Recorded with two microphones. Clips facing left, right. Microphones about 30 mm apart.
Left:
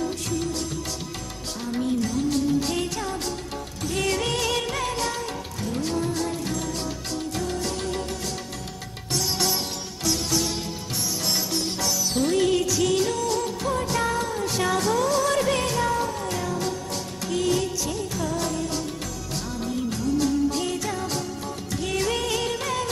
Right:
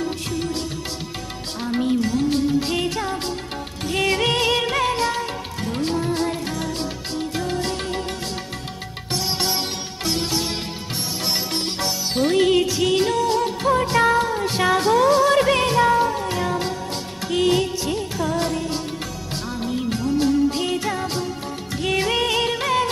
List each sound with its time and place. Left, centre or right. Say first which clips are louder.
0.3 s music: right 2 dB; right
1.6 s music of bollywood: right 4 dB; right
3.8 s music: right 5 dB; right
9.1 s music: right 2 dB; right
19.5 s music of bollywood: right 4 dB; right